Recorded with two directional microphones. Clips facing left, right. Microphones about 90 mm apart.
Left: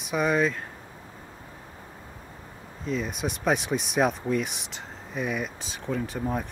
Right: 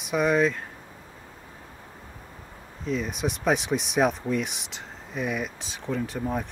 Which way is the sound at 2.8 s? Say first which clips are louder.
Right 1 dB; centre (ahead or behind).